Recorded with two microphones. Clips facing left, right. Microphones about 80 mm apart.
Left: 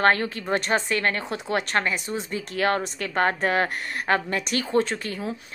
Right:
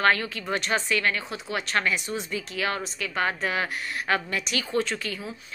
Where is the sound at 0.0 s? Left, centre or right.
Left.